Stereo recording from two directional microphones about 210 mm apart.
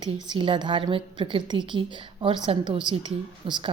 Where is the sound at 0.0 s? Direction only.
25° right (ahead or behind).